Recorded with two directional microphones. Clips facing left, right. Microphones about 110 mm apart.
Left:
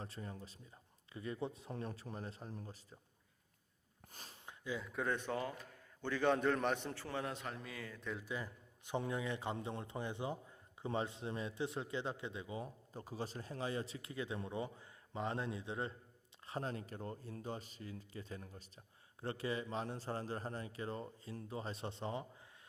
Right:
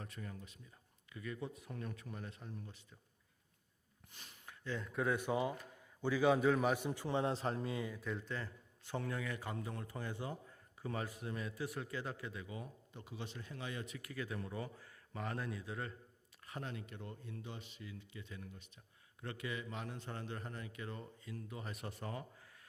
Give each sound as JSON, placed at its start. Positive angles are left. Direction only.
{"t": 0.0, "sound": "a man's voice", "side_deg": 30}
{"t": 4.1, "sound": "a man's voice", "side_deg": 35}
{"t": 4.6, "sound": "a man's voice", "side_deg": 5}
{"t": 8.0, "sound": "a man's voice", "side_deg": 5}